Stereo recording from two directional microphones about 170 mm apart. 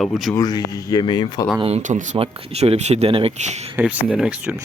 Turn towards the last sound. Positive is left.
turn(degrees=-5)  # may be behind; listen again after turning